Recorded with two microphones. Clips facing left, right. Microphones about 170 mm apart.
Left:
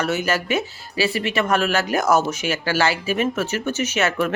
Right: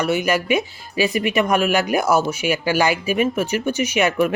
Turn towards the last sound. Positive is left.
turn(degrees=-15)  # may be behind; listen again after turning